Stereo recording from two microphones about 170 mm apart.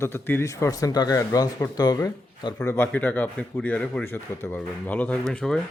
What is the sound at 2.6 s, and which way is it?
Speech, 10° left (ahead or behind).